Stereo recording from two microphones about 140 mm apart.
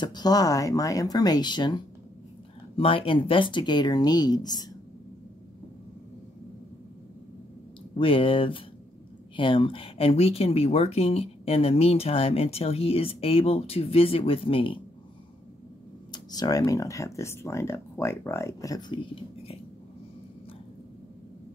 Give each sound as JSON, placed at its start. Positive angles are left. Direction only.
{"t": 0.0, "sound": "speech", "side_deg": 30}
{"t": 7.9, "sound": "speech", "side_deg": 40}
{"t": 16.1, "sound": "speech", "side_deg": 30}